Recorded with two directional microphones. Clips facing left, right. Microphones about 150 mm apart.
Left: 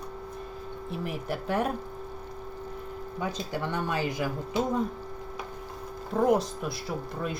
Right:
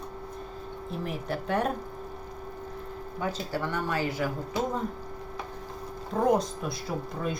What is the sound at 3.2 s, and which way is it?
Speech, 15° left (ahead or behind).